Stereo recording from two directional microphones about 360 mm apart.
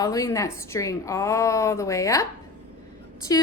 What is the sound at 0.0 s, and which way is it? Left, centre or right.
A woman's voice, centre.